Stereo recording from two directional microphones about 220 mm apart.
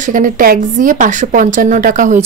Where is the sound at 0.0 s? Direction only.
35° right (ahead or behind).